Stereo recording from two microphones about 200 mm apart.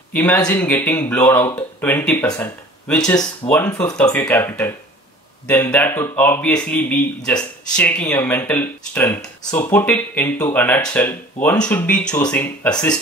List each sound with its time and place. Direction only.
0.1 s speech: 5° left (ahead or behind)
3.4 s speech: 10° left (ahead or behind)